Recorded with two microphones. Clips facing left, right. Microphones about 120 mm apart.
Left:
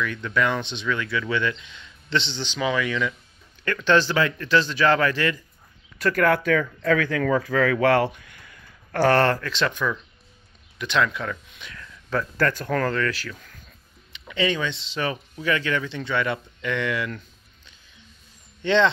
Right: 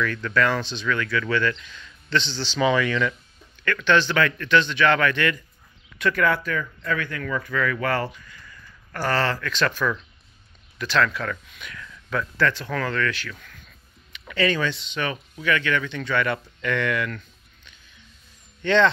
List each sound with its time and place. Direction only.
0.0 s speech: 15° left (ahead or behind)
2.6 s speech: 5° left (ahead or behind)
3.6 s speech: 35° left (ahead or behind)
6.4 s speech: 85° left
9.4 s speech: 25° left (ahead or behind)
14.2 s speech: 20° left (ahead or behind)
14.8 s speech: 30° left (ahead or behind)
18.6 s speech: 25° left (ahead or behind)